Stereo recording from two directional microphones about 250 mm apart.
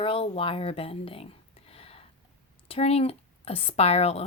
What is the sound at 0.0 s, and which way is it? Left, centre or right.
Speech, left.